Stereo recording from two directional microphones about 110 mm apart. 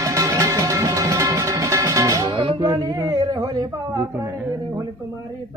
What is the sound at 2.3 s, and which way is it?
Music, 50° right (ahead or behind).